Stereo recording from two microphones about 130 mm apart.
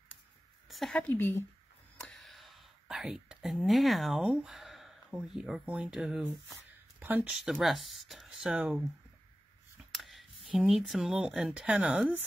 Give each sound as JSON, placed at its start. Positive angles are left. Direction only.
{"t": 0.7, "sound": "a sound", "side_deg": 0}
{"t": 0.9, "sound": "speech", "side_deg": 15}
{"t": 2.0, "sound": "whispering", "side_deg": 0}
{"t": 5.1, "sound": "speech", "side_deg": -5}
{"t": 7.4, "sound": "speech", "side_deg": 0}
{"t": 9.9, "sound": "a sound", "side_deg": 0}
{"t": 10.6, "sound": "speech", "side_deg": -5}